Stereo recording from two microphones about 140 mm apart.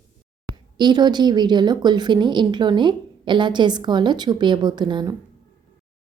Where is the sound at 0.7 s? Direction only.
30° right (ahead or behind).